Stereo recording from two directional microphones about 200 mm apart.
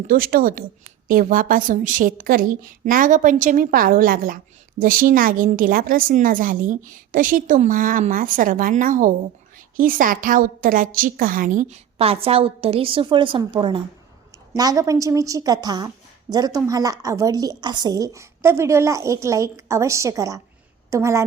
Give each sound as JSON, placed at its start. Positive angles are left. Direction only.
{"t": 0.1, "sound": "a woman's voice", "side_deg": -45}